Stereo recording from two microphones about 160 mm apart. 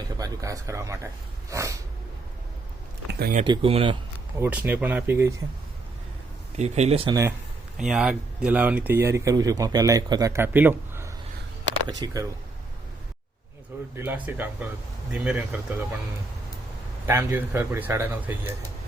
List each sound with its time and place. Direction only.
0.2 s speech: 20° right (ahead or behind)
1.5 s a sound: 20° right (ahead or behind)
3.1 s a sound: 80° right
3.4 s speech: 35° right (ahead or behind)
4.4 s speech: 10° right (ahead or behind)
6.6 s speech: 40° right (ahead or behind)
7.8 s speech: 5° right (ahead or behind); by 12.2 s 20° right (ahead or behind)
13.9 s speech: 10° right (ahead or behind)
17.1 s speech: 15° right (ahead or behind)